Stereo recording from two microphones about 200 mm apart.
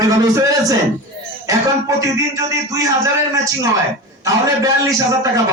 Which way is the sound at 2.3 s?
15° right (ahead or behind).